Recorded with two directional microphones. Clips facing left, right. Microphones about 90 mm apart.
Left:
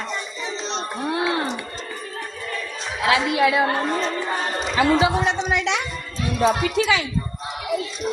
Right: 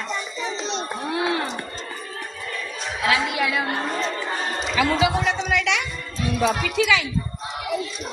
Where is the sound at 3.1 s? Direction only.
25° left (ahead or behind).